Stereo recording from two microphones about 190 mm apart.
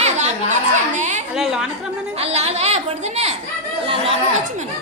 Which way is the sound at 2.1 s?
35° right (ahead or behind).